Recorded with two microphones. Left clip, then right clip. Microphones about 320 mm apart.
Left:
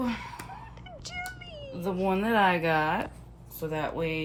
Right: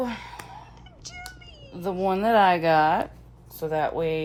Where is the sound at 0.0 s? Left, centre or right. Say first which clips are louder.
Right 3 dB; right.